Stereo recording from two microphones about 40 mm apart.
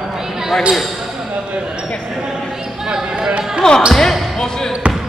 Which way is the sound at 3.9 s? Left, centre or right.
Centre.